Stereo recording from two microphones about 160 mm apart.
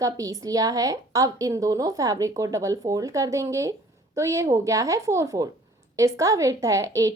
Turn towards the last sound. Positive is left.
turn(degrees=-20)  # may be behind; listen again after turning